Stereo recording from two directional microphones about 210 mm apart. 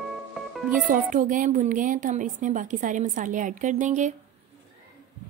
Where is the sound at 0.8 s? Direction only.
40° right (ahead or behind).